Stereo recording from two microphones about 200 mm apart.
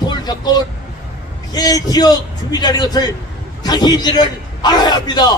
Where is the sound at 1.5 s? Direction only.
20° left (ahead or behind).